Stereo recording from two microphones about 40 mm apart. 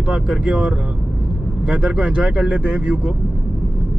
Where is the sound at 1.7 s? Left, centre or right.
Right.